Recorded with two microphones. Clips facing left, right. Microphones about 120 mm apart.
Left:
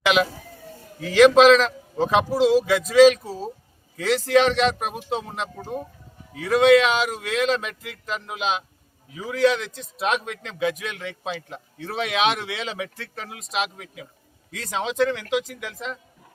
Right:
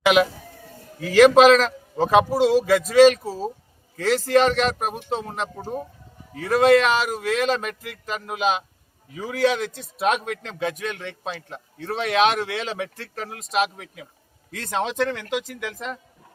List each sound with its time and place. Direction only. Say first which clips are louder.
0.0 s a man's voice: right 3 dB; 5° right (ahead or behind)
6.3 s a man's voice: left 1 dB; centre (ahead or behind)
9.6 s a man's voice: right 5 dB; 45° right (ahead or behind)
10.6 s a man's voice: left 3 dB; 5° left (ahead or behind)